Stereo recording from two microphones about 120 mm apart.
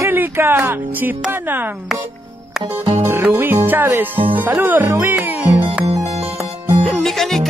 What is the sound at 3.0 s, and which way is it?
Speech, 20° right (ahead or behind).